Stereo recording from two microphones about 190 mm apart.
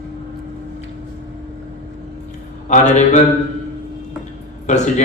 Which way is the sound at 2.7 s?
40° left (ahead or behind).